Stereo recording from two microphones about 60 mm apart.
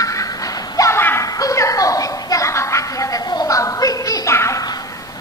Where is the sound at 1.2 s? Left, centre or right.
Left.